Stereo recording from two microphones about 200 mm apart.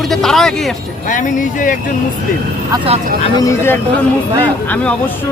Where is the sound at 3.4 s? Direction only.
15° left (ahead or behind).